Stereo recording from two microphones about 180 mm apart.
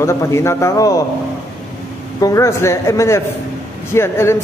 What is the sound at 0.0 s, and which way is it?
A man's voice, 15° left (ahead or behind).